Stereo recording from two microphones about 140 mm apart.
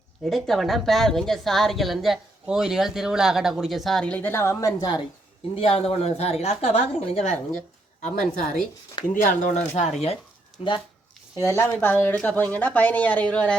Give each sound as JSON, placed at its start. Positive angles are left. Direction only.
{"t": 0.3, "sound": "a woman's voice", "side_deg": 0}
{"t": 5.5, "sound": "a woman's voice", "side_deg": 45}
{"t": 8.0, "sound": "a woman's voice", "side_deg": 70}
{"t": 9.2, "sound": "a woman's voice", "side_deg": 60}
{"t": 11.3, "sound": "speech", "side_deg": 20}